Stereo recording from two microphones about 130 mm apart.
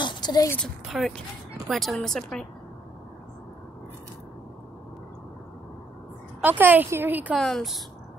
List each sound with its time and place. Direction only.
0.0 s a sound: 35° left (ahead or behind)
0.8 s speech: 5° right (ahead or behind)
6.4 s a woman's voice: 15° right (ahead or behind)
7.3 s speech: centre (ahead or behind)